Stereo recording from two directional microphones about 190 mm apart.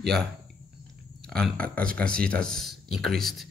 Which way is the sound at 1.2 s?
5° left (ahead or behind).